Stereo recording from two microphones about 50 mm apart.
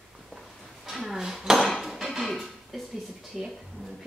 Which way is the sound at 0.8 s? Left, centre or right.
Centre.